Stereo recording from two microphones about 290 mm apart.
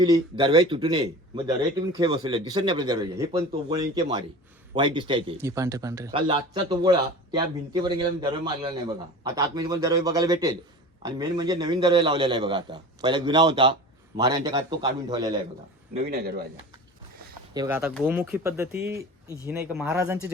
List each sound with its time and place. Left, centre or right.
0.0 s speech: centre
16.0 s speech: right
17.5 s speech: centre